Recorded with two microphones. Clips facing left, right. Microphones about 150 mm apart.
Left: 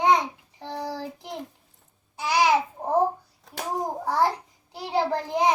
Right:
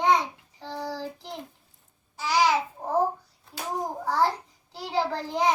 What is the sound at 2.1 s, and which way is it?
Babbling, 15° left (ahead or behind).